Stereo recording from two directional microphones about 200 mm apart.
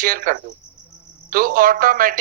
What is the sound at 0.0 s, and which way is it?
A man's voice, 45° right (ahead or behind).